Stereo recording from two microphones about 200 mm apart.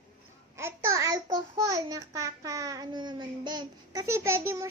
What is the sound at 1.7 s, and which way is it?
A child's voice, 15° right (ahead or behind).